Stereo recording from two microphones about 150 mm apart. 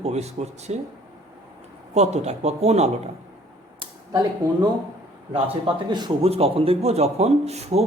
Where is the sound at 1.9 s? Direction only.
45° right (ahead or behind).